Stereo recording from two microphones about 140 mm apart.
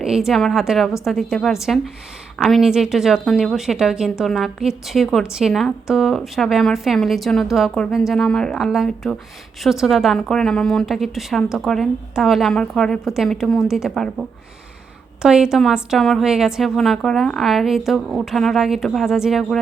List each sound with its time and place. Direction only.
0.0 s a woman's voice: 5° right (ahead or behind)